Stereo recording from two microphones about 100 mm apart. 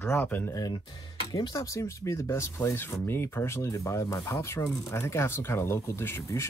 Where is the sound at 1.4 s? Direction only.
35° left (ahead or behind).